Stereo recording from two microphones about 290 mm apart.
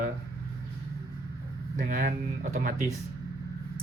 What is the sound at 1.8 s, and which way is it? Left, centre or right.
Speech, right.